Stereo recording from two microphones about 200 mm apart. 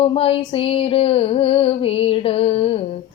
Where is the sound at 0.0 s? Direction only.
30° left (ahead or behind).